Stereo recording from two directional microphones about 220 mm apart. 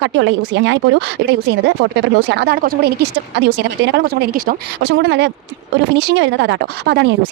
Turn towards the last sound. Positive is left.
turn(degrees=-50)  # may be behind; listen again after turning